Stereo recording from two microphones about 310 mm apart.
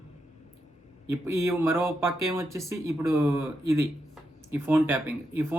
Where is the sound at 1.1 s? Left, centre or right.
Centre.